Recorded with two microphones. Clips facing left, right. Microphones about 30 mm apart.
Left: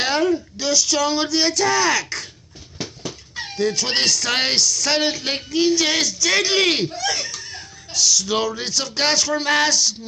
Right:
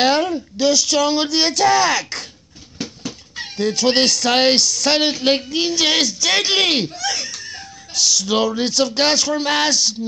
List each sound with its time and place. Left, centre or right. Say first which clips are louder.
0.0 s a sound: right 4 dB; right
0.6 s speech: right 8 dB; right
4.6 s speech: right 2 dB; right
6.6 s speech: right 1 dB; centre
7.9 s speech: right 1 dB; right
9.4 s speech: even; right
9.7 s speech: right 1 dB; right